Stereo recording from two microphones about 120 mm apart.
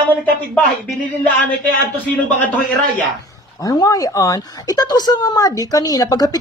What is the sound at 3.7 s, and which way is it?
A woman's voice, 30° left (ahead or behind).